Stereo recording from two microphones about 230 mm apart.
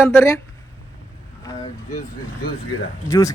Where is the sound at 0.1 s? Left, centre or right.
Centre.